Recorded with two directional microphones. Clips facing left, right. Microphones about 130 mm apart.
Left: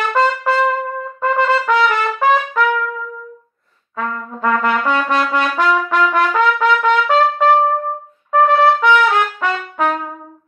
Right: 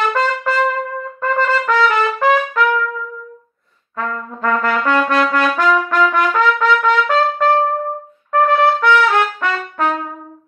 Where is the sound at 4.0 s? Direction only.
5° left (ahead or behind).